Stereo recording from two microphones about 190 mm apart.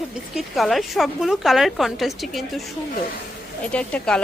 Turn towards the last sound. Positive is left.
turn(degrees=5)  # may be behind; listen again after turning